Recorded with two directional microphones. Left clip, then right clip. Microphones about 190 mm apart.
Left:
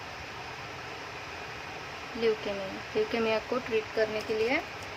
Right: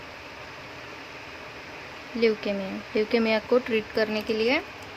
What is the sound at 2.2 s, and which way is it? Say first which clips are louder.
Speech: right 5 dB; 35° right (ahead or behind).